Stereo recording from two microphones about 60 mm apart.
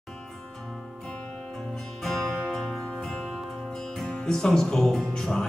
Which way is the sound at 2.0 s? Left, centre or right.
Centre.